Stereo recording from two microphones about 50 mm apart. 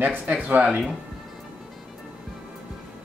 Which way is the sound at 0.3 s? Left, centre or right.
Right.